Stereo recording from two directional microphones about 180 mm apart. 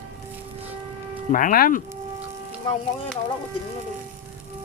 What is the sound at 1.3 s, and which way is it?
Speech, 50° left (ahead or behind).